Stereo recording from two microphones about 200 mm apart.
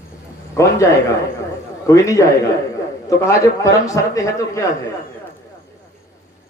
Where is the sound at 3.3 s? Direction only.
15° left (ahead or behind).